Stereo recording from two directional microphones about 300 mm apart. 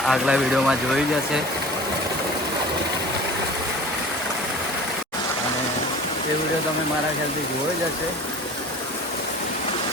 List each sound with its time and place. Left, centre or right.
0.1 s speech: centre